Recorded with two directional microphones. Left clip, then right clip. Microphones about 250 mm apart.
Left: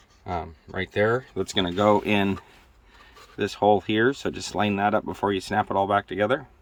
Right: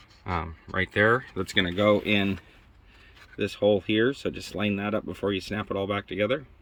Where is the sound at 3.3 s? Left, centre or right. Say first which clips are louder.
Left 3 dB; left.